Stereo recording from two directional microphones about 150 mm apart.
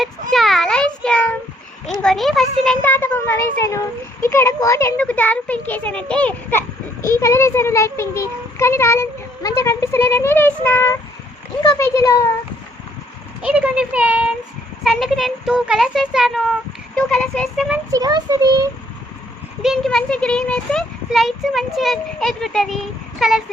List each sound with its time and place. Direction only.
0.0 s child singing: centre (ahead or behind)
1.9 s speech: centre (ahead or behind)
2.8 s a child's voice: 15° left (ahead or behind)
13.4 s speech: 5° right (ahead or behind)
17.9 s a child's voice: 25° right (ahead or behind)
19.6 s speech: centre (ahead or behind)